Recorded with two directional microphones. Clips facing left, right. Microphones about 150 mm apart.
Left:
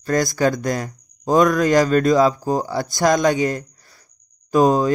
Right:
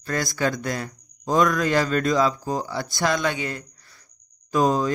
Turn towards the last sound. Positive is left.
turn(degrees=45)  # may be behind; listen again after turning